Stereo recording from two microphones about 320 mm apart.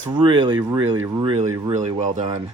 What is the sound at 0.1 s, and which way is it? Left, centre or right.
A man's voice, centre.